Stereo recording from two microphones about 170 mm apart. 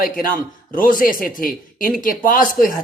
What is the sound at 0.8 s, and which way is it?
Speech, 55° left (ahead or behind).